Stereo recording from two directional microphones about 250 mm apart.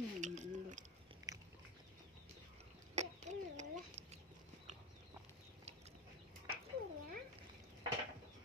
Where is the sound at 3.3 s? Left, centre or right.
Right.